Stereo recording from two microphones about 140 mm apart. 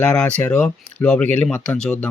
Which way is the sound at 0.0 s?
10° left (ahead or behind).